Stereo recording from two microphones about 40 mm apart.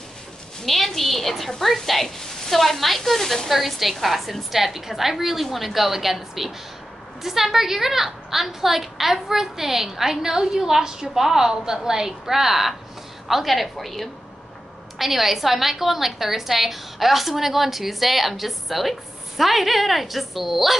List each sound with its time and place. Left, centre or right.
0.7 s a woman's voice: centre